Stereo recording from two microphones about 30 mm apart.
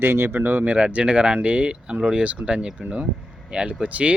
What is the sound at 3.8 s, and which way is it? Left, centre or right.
Speech, right.